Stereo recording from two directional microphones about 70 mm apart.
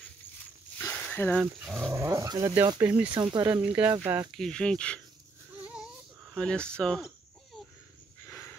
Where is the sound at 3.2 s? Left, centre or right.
Right.